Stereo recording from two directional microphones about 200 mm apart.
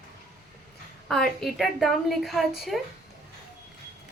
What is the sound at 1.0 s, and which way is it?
A woman's voice, centre (ahead or behind).